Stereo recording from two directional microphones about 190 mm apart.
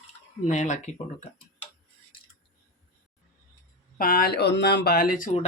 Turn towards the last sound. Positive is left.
turn(degrees=40)  # may be behind; listen again after turning